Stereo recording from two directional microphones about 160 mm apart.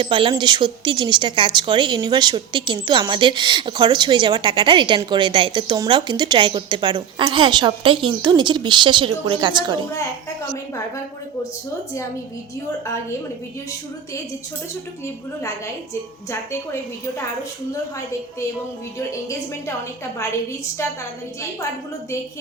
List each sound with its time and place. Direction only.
0.0 s speech: 30° right (ahead or behind)
18.9 s a woman's voice: 20° left (ahead or behind)